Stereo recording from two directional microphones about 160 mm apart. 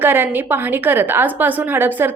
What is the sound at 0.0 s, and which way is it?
A woman's voice, 15° right (ahead or behind).